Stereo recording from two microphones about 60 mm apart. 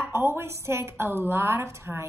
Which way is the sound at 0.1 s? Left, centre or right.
Right.